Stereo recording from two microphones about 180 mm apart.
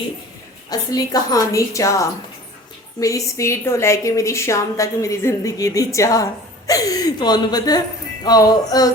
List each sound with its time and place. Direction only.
0.7 s a woman's voice: 20° left (ahead or behind)